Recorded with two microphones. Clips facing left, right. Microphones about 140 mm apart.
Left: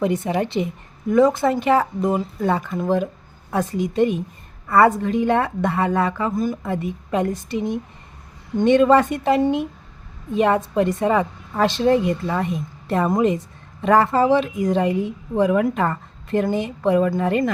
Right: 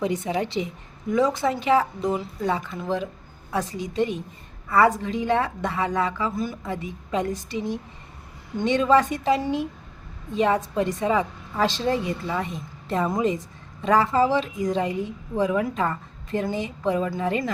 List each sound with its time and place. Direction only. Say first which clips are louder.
0.0 s a woman's voice: left 4 dB; 55° left (ahead or behind)